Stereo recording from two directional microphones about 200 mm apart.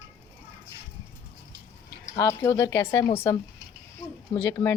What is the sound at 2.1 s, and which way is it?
Speech, 15° left (ahead or behind).